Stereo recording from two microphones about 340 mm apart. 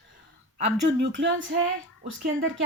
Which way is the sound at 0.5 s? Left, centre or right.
Centre.